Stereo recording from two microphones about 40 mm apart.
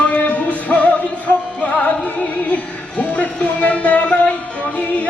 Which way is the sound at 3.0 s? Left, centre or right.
Left.